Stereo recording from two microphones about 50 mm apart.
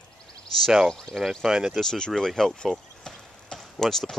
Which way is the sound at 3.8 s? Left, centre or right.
Centre.